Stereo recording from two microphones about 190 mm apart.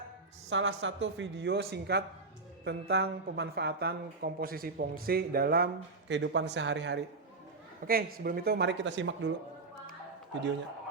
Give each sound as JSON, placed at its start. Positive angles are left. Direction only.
{"t": 0.5, "sound": "speech", "side_deg": -85}
{"t": 7.9, "sound": "speech", "side_deg": -50}